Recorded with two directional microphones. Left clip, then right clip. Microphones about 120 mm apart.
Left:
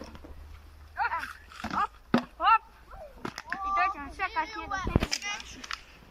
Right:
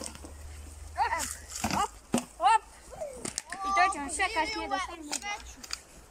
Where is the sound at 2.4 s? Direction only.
50° right (ahead or behind).